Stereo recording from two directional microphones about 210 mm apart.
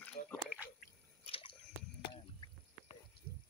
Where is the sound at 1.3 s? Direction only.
25° left (ahead or behind).